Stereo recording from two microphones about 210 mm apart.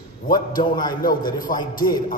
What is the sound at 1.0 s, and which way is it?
Speech, 40° left (ahead or behind).